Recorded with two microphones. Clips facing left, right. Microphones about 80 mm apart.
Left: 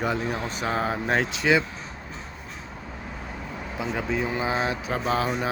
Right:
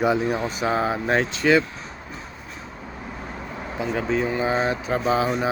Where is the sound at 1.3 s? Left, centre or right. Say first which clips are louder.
Right 4 dB; centre.